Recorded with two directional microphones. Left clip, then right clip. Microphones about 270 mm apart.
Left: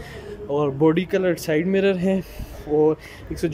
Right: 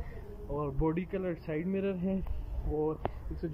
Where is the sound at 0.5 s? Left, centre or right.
Left.